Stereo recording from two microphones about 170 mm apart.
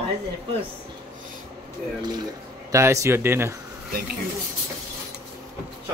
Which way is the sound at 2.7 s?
20° right (ahead or behind).